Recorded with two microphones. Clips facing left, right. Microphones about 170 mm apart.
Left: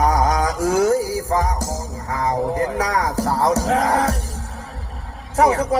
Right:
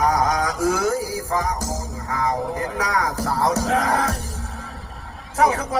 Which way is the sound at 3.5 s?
30° left (ahead or behind).